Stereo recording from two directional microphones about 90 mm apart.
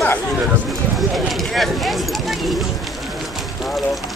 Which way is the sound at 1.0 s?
Centre (ahead or behind).